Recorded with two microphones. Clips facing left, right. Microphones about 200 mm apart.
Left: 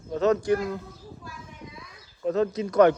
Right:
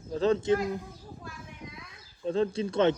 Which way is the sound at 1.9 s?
30° right (ahead or behind).